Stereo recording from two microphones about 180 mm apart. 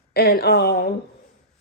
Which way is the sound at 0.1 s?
60° left (ahead or behind).